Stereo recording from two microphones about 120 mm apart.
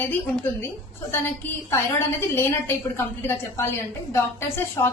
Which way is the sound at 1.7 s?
20° left (ahead or behind).